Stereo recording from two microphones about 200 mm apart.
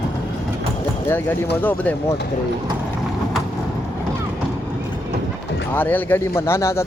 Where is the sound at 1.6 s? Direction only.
10° left (ahead or behind).